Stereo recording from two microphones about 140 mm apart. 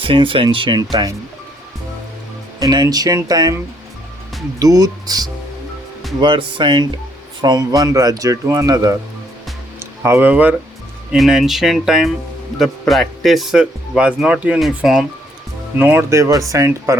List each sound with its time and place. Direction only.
0.0 s speech: 40° right (ahead or behind)
2.6 s speech: 25° right (ahead or behind)
4.6 s speech: 25° right (ahead or behind)
10.0 s speech: 15° right (ahead or behind)
15.8 s speech: 15° right (ahead or behind)